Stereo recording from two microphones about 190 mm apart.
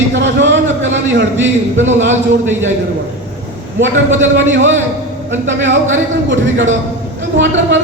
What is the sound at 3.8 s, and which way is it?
A man's voice, 75° right (ahead or behind).